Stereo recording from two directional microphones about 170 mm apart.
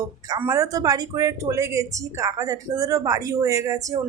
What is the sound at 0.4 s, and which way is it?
A woman's voice, 20° right (ahead or behind).